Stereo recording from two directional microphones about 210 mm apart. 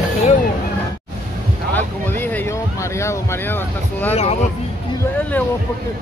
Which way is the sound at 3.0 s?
10° left (ahead or behind).